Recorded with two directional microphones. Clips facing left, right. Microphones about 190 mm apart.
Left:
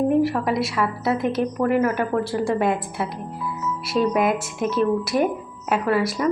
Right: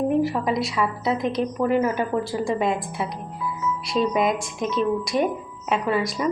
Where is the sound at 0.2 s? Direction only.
Centre (ahead or behind).